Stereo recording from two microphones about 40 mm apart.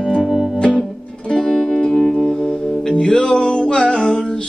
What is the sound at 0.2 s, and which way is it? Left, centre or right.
Music, centre.